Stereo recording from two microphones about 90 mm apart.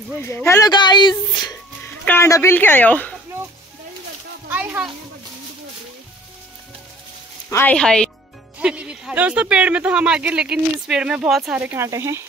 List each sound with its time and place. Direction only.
0.2 s speech: 30° left (ahead or behind)
0.6 s a woman's voice: 55° left (ahead or behind)
2.0 s a woman's voice: 30° left (ahead or behind)
2.5 s speech: 20° left (ahead or behind)
4.5 s a sound: 20° right (ahead or behind)
7.4 s speech: 30° left (ahead or behind)
7.7 s speech: 10° left (ahead or behind)
8.5 s speech: 10° right (ahead or behind)
11.5 s speech: 15° right (ahead or behind)
11.8 s speech: 30° right (ahead or behind)